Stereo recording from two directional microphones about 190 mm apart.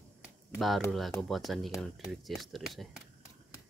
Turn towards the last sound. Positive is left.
turn(degrees=0)  # may be behind; listen again after turning